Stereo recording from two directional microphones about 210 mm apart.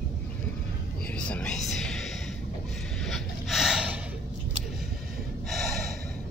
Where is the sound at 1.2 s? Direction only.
5° left (ahead or behind).